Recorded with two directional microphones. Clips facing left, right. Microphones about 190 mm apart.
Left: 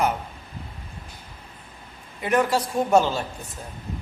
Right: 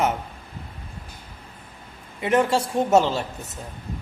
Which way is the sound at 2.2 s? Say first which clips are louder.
Right 1 dB; 25° right (ahead or behind).